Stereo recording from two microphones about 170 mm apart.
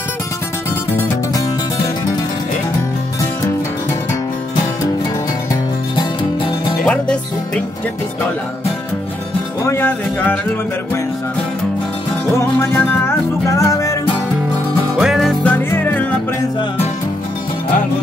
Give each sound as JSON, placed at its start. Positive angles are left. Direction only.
{"t": 0.9, "sound": "music", "side_deg": 20}
{"t": 5.5, "sound": "music", "side_deg": 25}
{"t": 6.8, "sound": "music", "side_deg": 5}
{"t": 9.7, "sound": "music", "side_deg": 10}
{"t": 12.4, "sound": "music", "side_deg": 15}
{"t": 15.0, "sound": "music", "side_deg": 0}